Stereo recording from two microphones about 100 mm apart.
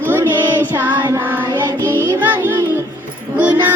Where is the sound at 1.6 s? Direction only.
25° right (ahead or behind).